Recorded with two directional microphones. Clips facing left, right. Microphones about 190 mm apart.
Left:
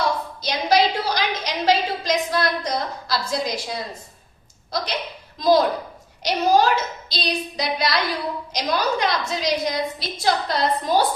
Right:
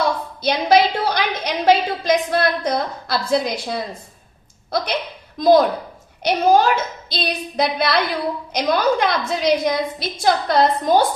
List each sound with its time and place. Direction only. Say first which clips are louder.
0.4 s a woman's voice: right 4 dB; 60° right (ahead or behind)